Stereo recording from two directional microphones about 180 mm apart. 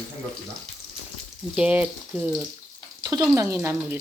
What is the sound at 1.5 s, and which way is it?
Speech, 10° right (ahead or behind).